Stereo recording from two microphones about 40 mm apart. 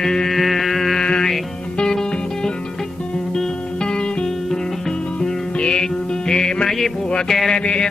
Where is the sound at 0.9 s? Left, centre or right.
Centre.